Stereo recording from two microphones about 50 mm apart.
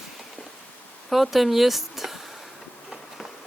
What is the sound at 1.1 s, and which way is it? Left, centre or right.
Speech, centre.